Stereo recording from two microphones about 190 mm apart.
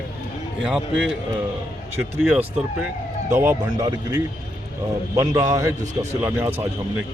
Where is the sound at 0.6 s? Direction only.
Centre (ahead or behind).